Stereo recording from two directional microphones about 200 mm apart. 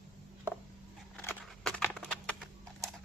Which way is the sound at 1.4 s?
5° left (ahead or behind).